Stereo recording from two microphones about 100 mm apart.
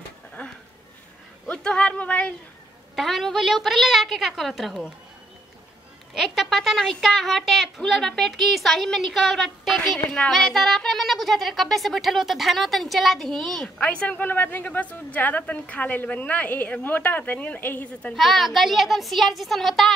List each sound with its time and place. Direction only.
1.5 s a sound: 10° left (ahead or behind)
3.0 s a child's voice: centre (ahead or behind)
6.1 s a child's voice: centre (ahead or behind)
13.7 s a woman's voice: 15° left (ahead or behind)
18.1 s a child's voice: centre (ahead or behind)